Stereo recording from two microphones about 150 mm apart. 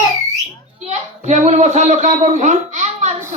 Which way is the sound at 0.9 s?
50° right (ahead or behind).